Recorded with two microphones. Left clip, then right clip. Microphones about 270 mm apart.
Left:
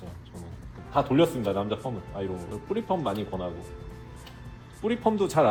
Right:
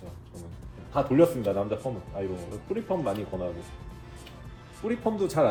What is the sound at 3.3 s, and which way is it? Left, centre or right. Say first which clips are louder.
Speech: even; centre.